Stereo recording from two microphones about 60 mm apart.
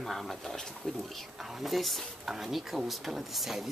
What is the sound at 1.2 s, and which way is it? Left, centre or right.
Speech, centre.